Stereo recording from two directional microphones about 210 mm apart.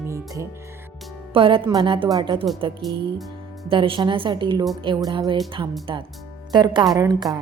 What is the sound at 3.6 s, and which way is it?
A woman's voice, 25° right (ahead or behind).